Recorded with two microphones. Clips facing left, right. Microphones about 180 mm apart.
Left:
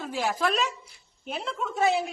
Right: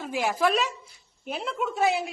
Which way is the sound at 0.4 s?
Centre (ahead or behind).